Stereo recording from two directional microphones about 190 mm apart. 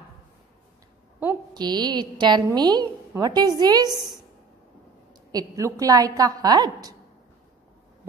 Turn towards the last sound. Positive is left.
turn(degrees=-20)  # may be behind; listen again after turning